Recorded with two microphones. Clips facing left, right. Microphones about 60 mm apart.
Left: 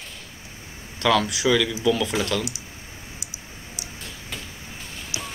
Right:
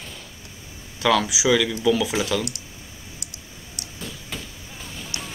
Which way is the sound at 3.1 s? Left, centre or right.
Right.